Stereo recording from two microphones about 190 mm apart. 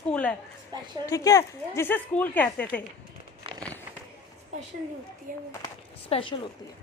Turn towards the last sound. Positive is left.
turn(degrees=30)  # may be behind; listen again after turning